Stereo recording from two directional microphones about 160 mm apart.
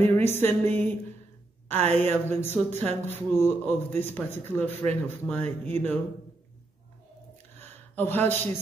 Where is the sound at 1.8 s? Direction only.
40° right (ahead or behind).